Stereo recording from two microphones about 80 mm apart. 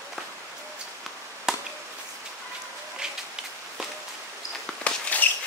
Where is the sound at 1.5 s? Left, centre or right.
Centre.